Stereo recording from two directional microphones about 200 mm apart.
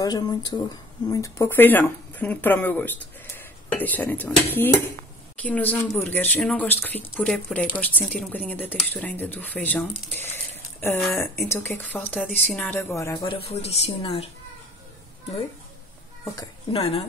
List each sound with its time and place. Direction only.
0.0 s speech: 20° left (ahead or behind)
13.3 s speech: 30° left (ahead or behind)
16.7 s a woman's voice: 30° left (ahead or behind)